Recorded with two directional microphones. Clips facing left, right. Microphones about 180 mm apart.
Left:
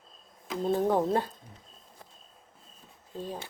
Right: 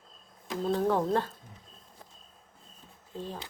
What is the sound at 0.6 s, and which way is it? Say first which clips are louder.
Speech: left 1 dB; 15° left (ahead or behind).